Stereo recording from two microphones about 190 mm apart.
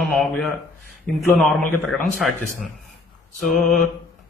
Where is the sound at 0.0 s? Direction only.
Centre (ahead or behind).